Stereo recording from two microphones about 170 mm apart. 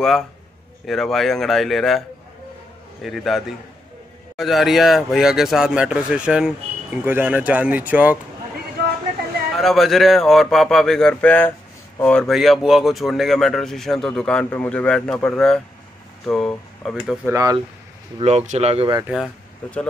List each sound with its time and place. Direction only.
0.8 s speech: centre (ahead or behind)
9.6 s speech: centre (ahead or behind)
17.3 s speech: 20° right (ahead or behind)
18.2 s speech: 40° right (ahead or behind)
19.0 s speech: 5° right (ahead or behind)